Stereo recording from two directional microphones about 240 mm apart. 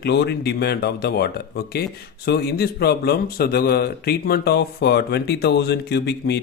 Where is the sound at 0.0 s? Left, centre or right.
Left.